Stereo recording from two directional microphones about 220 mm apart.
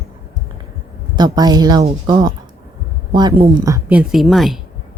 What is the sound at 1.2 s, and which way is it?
Speech, 20° right (ahead or behind).